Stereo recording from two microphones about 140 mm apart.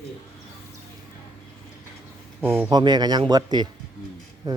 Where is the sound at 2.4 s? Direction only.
15° right (ahead or behind).